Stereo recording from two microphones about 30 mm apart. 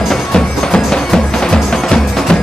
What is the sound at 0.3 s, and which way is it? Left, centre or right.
Music, left.